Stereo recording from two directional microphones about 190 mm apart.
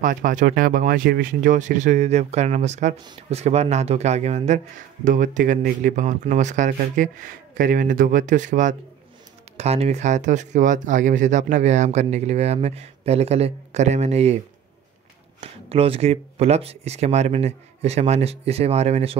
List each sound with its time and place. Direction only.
0.0 s speech: 45° right (ahead or behind)
15.4 s speech: 30° right (ahead or behind)